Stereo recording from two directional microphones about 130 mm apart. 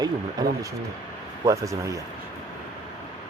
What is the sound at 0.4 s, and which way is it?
Speech, 30° right (ahead or behind).